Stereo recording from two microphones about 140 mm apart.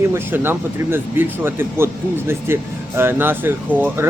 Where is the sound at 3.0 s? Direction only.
15° right (ahead or behind).